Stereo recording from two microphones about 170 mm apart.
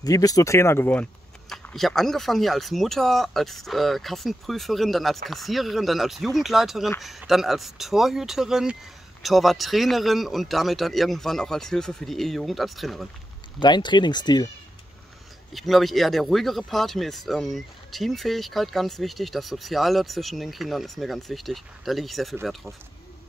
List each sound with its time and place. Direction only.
0.0 s speech: 20° left (ahead or behind)
1.5 s speech: centre (ahead or behind)
13.6 s speech: 25° left (ahead or behind)
15.5 s speech: centre (ahead or behind)